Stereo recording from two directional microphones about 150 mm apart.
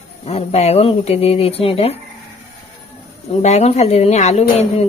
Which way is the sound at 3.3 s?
45° left (ahead or behind).